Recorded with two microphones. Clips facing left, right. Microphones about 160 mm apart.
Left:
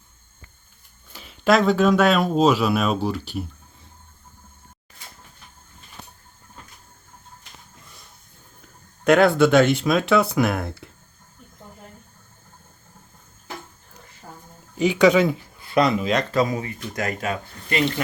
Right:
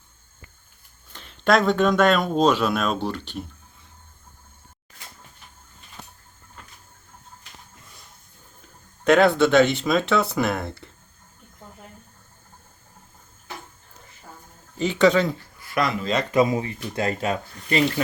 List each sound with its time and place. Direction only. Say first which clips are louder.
1.1 s speech: left 1 dB; 5° left (ahead or behind)
9.0 s speech: left 1 dB; centre (ahead or behind)
14.8 s speech: left 2 dB; 5° left (ahead or behind)
15.5 s a sound: left 5 dB; 25° left (ahead or behind)
16.3 s speech: right 2 dB; 20° right (ahead or behind)